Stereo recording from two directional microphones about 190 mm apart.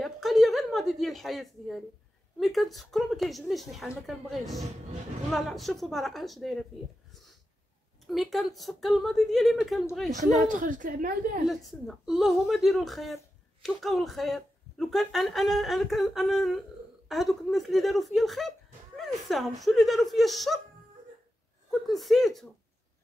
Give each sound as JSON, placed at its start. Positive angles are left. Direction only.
{"t": 0.0, "sound": "a sound", "side_deg": 0}
{"t": 2.4, "sound": "a woman's voice", "side_deg": 0}
{"t": 8.1, "sound": "a woman's voice", "side_deg": 0}
{"t": 10.5, "sound": "a woman's voice", "side_deg": -45}
{"t": 11.4, "sound": "a woman's voice", "side_deg": 0}
{"t": 21.6, "sound": "a woman's voice", "side_deg": 0}